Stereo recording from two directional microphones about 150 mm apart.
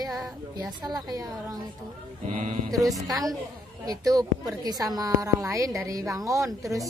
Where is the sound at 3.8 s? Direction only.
25° right (ahead or behind).